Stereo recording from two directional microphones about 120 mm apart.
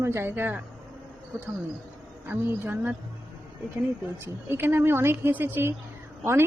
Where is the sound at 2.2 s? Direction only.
15° right (ahead or behind).